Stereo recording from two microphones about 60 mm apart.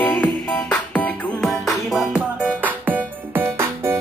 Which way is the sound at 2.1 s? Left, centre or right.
Right.